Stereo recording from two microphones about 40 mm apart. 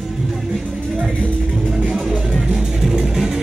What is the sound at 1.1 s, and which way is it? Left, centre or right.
Music, left.